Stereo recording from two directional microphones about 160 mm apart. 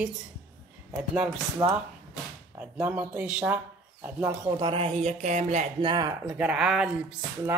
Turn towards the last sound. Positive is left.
turn(degrees=-5)  # may be behind; listen again after turning